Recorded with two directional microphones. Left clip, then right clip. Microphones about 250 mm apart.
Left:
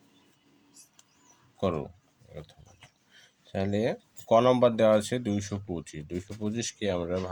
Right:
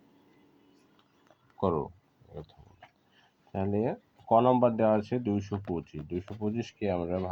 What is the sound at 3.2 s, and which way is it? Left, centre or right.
Speech, left.